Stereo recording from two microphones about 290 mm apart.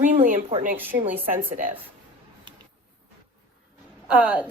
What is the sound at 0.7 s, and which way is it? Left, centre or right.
Speech, centre.